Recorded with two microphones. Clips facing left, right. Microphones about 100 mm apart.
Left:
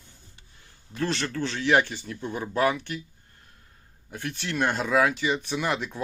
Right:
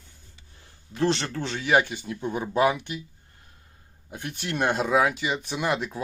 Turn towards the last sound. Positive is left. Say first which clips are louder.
# right 1 dB
turn(degrees=-5)  # may be behind; listen again after turning